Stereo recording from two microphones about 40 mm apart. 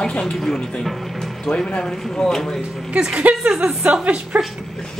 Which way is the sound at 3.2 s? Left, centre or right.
Right.